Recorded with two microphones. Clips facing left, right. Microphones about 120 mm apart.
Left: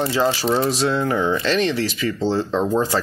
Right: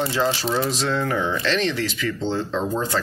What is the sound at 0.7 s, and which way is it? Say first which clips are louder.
Speech: left 3 dB; 10° left (ahead or behind).